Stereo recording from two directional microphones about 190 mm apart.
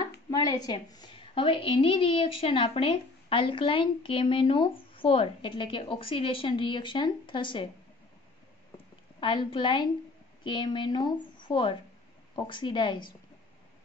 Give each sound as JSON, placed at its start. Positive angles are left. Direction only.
{"t": 0.3, "sound": "a woman's voice", "side_deg": 20}
{"t": 8.7, "sound": "a sound", "side_deg": 25}
{"t": 10.4, "sound": "a woman's voice", "side_deg": 25}